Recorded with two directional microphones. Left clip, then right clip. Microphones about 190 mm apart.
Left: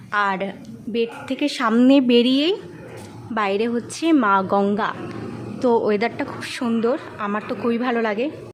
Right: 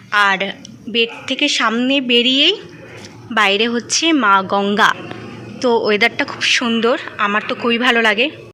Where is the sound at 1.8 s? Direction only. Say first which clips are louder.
Right 1 dB; 30° left (ahead or behind).